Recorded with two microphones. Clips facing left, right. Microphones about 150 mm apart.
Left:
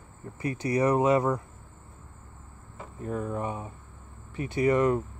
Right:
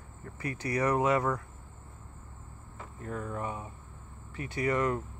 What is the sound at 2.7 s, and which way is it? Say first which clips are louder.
Speech: left 5 dB; 15° left (ahead or behind).